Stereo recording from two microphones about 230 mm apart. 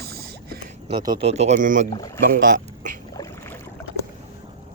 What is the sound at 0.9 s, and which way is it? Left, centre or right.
Speech, centre.